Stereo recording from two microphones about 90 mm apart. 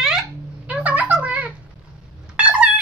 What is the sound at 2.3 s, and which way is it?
Cat, 10° right (ahead or behind).